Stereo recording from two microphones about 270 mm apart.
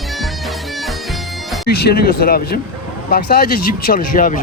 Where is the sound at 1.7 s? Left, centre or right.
Left.